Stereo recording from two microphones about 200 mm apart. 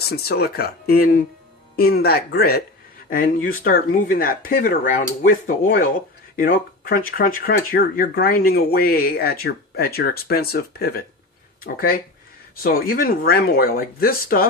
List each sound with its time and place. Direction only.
0.1 s speech: 50° left (ahead or behind)